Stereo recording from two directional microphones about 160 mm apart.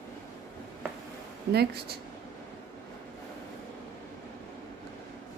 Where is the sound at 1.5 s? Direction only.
90° right.